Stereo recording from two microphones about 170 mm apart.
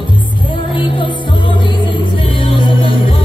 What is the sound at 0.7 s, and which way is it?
Music, 30° left (ahead or behind).